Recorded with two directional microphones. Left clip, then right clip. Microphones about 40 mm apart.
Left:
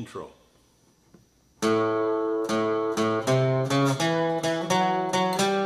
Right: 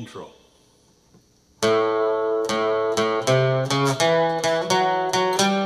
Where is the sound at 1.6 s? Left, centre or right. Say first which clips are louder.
Right 4 dB; right.